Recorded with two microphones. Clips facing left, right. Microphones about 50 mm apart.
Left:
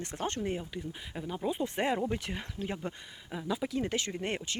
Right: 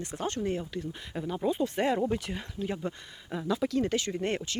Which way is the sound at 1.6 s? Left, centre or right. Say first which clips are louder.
Right 2 dB; left.